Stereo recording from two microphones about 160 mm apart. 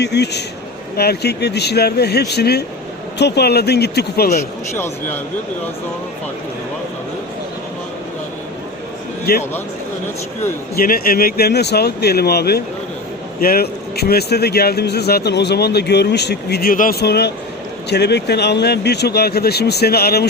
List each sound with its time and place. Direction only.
0.0 s speech: 90° left
4.8 s speech: 15° left (ahead or behind)
9.3 s speech: 80° left
10.8 s speech: 65° left (ahead or behind); by 12.6 s 85° left
13.4 s speech: 70° left (ahead or behind)